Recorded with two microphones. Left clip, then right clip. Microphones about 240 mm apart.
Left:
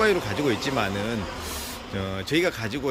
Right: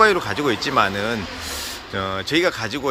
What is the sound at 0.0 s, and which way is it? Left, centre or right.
Speech, centre.